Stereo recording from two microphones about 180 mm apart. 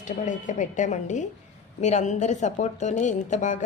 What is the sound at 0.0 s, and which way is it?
A woman's voice, 45° left (ahead or behind).